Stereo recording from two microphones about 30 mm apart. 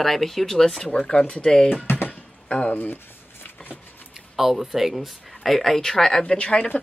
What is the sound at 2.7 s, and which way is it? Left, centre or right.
Speech, left.